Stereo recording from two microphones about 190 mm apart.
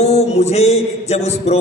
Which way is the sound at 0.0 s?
35° left (ahead or behind).